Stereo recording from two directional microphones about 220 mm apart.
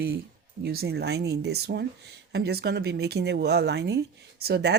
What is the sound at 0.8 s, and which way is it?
Speech, 50° right (ahead or behind).